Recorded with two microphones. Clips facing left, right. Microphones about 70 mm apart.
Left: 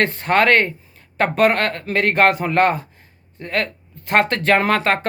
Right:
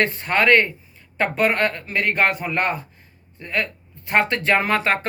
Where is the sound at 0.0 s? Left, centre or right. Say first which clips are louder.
Left 3 dB; left.